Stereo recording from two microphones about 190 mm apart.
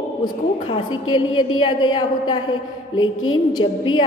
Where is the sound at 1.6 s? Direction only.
20° left (ahead or behind).